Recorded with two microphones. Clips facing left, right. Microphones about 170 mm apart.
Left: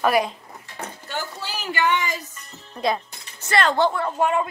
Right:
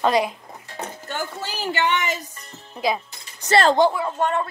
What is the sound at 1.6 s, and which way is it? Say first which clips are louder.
Speech: even; 25° right (ahead or behind).